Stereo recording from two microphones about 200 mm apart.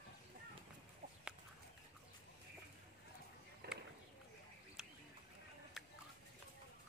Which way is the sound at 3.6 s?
55° right (ahead or behind).